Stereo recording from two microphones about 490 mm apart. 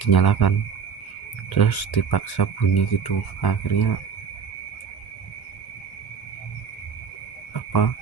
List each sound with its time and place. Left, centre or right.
0.0 s speech: left
1.5 s speech: left
7.5 s cricket: left